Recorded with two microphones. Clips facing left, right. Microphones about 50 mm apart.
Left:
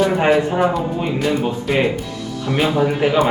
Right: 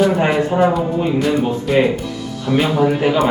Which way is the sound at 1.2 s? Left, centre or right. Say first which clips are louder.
Right 2 dB; centre.